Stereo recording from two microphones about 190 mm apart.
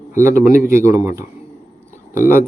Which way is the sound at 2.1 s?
10° right (ahead or behind).